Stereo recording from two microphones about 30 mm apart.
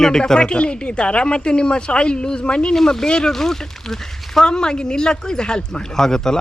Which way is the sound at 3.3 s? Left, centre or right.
Centre.